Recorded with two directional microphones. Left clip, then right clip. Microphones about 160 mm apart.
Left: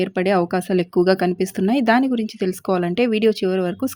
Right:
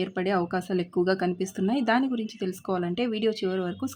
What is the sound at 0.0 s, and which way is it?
A woman's voice, 45° left (ahead or behind).